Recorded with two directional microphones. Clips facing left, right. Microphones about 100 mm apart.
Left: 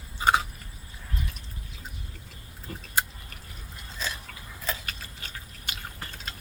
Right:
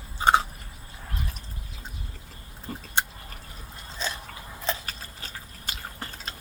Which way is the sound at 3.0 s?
25° right (ahead or behind).